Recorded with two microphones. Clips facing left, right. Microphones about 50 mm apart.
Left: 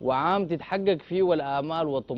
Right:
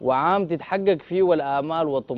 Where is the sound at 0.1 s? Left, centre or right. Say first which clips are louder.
Right 4 dB; centre.